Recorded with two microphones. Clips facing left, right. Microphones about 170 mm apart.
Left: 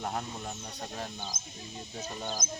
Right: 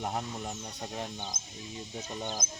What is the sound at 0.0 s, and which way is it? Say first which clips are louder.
Speech: right 1 dB; 10° right (ahead or behind).